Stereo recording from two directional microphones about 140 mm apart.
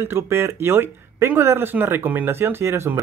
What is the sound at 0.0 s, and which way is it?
Speech, 15° right (ahead or behind).